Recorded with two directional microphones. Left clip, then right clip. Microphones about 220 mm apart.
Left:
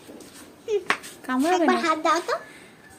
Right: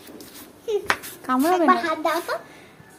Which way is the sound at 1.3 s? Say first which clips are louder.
Right 3 dB; centre (ahead or behind).